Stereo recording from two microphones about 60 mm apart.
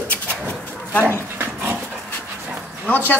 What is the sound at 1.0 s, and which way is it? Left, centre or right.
Dog, right.